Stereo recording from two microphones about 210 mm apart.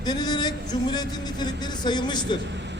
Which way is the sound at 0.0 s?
20° left (ahead or behind).